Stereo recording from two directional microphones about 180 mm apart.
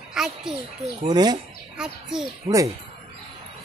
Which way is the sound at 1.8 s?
5° right (ahead or behind).